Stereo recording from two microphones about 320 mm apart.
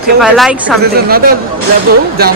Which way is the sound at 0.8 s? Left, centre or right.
Right.